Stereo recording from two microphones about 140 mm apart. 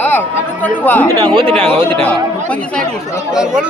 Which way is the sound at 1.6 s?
40° right (ahead or behind).